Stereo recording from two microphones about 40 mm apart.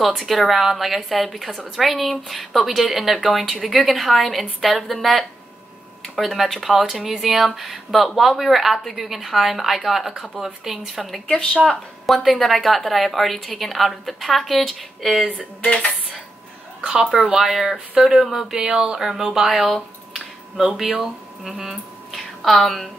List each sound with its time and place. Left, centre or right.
0.0 s a woman's voice: centre
6.0 s a sound: centre
6.3 s a woman's voice: centre
11.2 s speech: left
12.1 s a woman's voice: centre
15.2 s speech: left
16.8 s speech: centre
22.1 s a sound: centre